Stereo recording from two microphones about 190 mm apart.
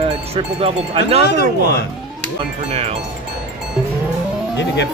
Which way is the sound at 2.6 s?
35° right (ahead or behind).